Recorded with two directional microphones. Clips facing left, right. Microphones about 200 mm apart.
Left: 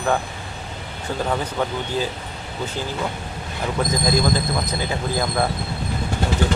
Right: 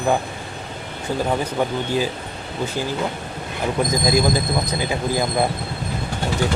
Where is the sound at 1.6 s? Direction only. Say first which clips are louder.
Right 3 dB; 10° right (ahead or behind).